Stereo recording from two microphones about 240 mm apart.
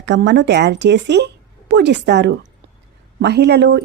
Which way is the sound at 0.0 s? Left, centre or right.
Right.